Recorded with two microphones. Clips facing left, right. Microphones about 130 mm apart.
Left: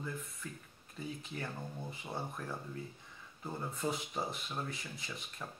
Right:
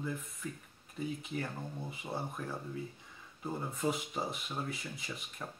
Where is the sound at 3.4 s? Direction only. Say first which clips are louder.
Right 3 dB; centre (ahead or behind).